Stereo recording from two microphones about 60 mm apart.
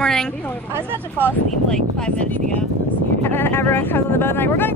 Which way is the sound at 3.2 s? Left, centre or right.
Left.